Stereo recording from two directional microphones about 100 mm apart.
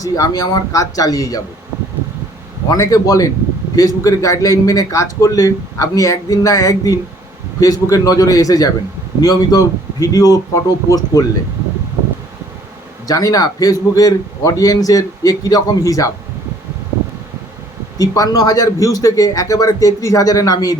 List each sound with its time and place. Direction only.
0.0 s a man's voice: 35° left (ahead or behind)
2.6 s a man's voice: 35° left (ahead or behind)
13.1 s a man's voice: 35° left (ahead or behind)
17.9 s a man's voice: 35° left (ahead or behind)